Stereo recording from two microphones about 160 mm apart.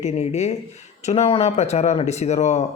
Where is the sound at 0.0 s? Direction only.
45° left (ahead or behind).